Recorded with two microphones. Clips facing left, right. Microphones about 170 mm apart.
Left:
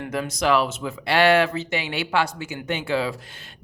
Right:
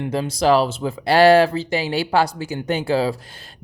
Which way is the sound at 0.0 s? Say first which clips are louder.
Right 5 dB; 30° right (ahead or behind).